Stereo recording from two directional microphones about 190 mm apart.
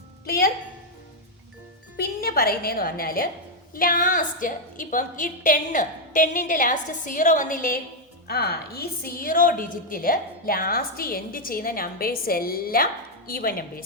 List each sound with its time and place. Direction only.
0.3 s a woman's voice: 50° left (ahead or behind)
2.0 s a woman's voice: 55° left (ahead or behind)